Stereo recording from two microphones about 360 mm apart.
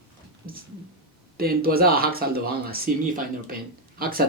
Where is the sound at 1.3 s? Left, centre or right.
Right.